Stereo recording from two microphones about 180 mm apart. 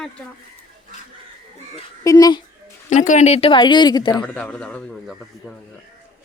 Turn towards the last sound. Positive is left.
turn(degrees=10)  # may be behind; listen again after turning